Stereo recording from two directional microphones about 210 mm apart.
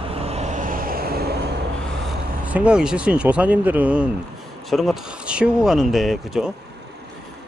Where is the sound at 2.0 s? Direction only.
5° right (ahead or behind).